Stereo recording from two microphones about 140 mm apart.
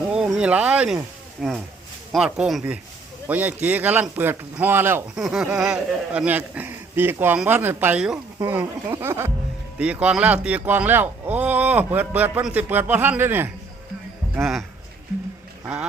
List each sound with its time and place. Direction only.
0.3 s a sound: 10° right (ahead or behind)
2.1 s speech: 5° right (ahead or behind)
5.1 s speech: centre (ahead or behind)